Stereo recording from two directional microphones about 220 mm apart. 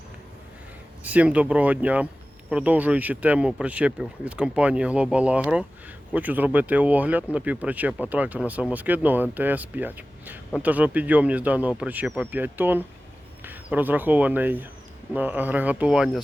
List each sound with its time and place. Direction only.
1.0 s speech: 5° right (ahead or behind)